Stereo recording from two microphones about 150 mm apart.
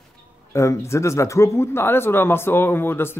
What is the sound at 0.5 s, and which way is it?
Speech, 20° left (ahead or behind).